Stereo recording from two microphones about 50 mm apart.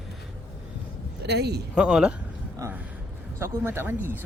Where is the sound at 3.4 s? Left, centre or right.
Right.